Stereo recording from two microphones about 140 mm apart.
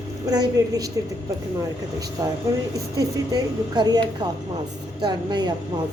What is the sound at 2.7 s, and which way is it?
A woman's voice, 25° right (ahead or behind).